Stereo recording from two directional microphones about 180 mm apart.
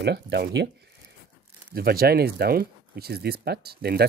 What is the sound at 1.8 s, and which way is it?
Speech, 55° right (ahead or behind).